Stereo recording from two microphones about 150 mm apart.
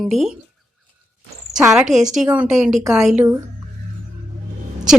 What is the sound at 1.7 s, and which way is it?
A woman's voice, 5° right (ahead or behind).